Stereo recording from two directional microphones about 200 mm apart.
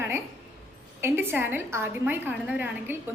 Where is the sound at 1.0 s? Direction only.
10° right (ahead or behind).